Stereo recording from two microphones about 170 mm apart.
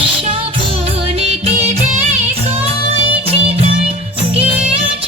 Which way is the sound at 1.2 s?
35° right (ahead or behind).